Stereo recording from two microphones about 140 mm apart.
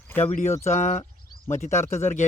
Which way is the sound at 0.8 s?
60° left (ahead or behind).